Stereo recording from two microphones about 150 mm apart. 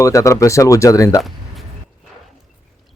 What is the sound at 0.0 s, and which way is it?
Speech, 20° left (ahead or behind).